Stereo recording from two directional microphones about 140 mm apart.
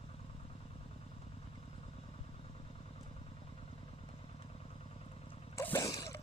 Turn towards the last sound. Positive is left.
turn(degrees=25)  # may be behind; listen again after turning